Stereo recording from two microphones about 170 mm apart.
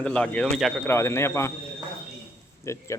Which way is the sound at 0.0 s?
5° left (ahead or behind).